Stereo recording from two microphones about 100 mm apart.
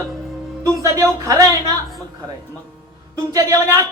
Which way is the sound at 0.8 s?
35° right (ahead or behind).